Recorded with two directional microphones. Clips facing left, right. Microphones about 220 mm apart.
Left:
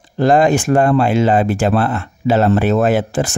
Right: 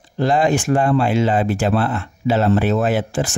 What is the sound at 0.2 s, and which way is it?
Speech, 50° left (ahead or behind).